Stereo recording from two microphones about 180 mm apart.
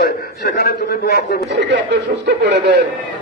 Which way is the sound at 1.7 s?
65° right (ahead or behind).